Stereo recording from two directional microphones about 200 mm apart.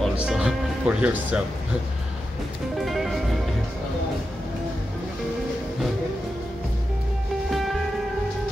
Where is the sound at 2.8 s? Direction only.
Centre (ahead or behind).